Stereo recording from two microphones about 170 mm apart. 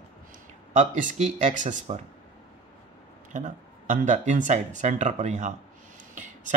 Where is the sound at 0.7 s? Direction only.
45° right (ahead or behind).